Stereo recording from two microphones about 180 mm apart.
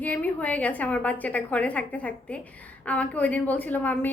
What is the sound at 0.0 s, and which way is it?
A woman's voice, 10° left (ahead or behind).